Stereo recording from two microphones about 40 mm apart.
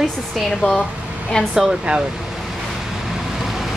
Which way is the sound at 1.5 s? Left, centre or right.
Right.